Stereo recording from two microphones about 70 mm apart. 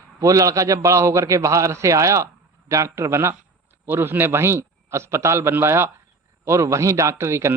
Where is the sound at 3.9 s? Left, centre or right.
Right.